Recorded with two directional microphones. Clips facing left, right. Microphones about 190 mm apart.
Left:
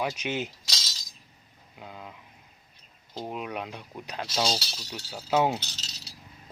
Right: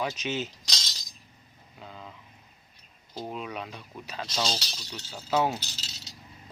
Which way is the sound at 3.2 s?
10° left (ahead or behind).